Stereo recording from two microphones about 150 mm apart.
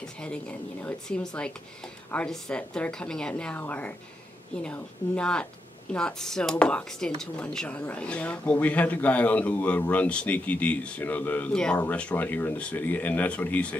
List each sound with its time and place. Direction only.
0.2 s speech: 5° left (ahead or behind)